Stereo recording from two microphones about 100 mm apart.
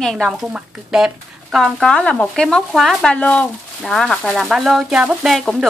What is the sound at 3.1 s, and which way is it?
A woman's voice, 15° left (ahead or behind).